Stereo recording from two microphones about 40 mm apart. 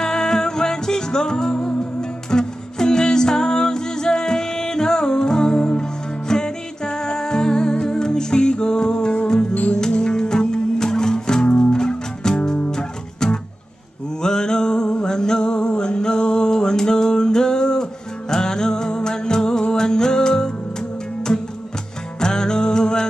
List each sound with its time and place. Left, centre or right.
0.0 s music: centre
22.2 s music: centre